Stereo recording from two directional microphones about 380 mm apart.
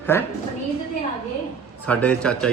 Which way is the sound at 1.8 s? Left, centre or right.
Centre.